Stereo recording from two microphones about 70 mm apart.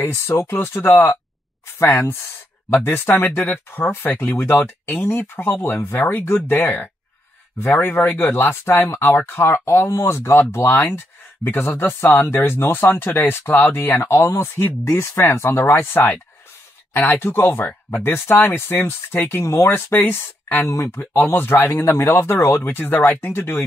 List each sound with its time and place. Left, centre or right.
0.0 s speech: left
19.4 s speech: left
19.7 s speech: left